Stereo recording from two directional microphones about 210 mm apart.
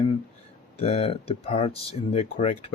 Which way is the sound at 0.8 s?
30° left (ahead or behind).